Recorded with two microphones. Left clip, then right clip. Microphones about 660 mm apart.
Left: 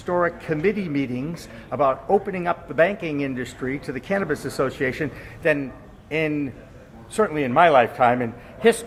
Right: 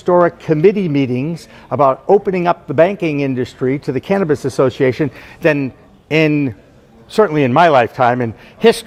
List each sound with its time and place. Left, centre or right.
0.0 s a man's voice: right